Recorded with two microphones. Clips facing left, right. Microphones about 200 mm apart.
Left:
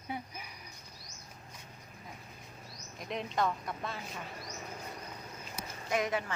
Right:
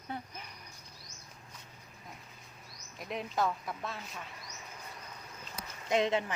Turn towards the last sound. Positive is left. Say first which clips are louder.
# right 3 dB
turn(degrees=-25)  # may be behind; listen again after turning